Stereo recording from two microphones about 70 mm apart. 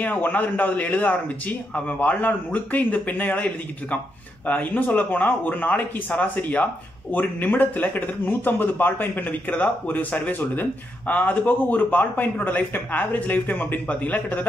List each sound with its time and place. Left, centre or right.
0.0 s speech: left